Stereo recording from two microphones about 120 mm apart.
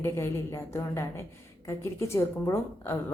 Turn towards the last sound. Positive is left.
turn(degrees=20)  # may be behind; listen again after turning